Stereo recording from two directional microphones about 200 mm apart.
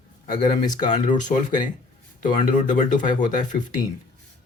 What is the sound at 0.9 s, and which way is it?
Speech, 40° left (ahead or behind).